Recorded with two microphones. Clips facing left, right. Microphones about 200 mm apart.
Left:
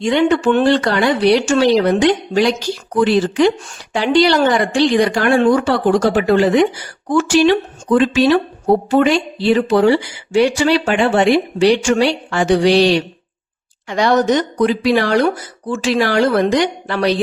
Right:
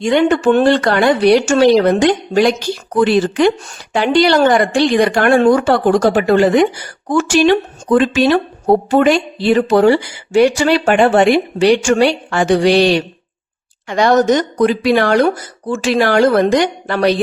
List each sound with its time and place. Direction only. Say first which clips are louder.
0.0 s speech: right 2 dB; 50° right (ahead or behind)